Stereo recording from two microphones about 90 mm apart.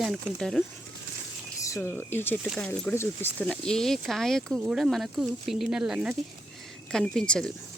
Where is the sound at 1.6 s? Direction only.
35° left (ahead or behind).